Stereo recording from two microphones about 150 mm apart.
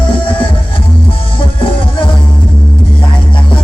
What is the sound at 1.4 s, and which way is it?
Music, 35° left (ahead or behind).